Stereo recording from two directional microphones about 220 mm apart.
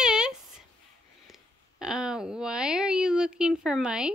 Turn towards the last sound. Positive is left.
turn(degrees=-5)  # may be behind; listen again after turning